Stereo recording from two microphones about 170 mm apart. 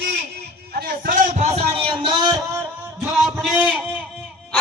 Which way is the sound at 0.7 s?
60° right (ahead or behind).